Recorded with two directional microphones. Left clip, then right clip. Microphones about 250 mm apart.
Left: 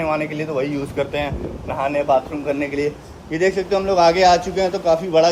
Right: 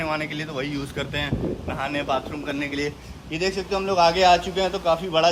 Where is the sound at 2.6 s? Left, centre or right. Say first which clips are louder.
Left 3 dB; centre.